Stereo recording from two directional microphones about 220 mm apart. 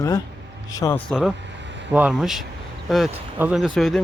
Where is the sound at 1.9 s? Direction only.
5° right (ahead or behind).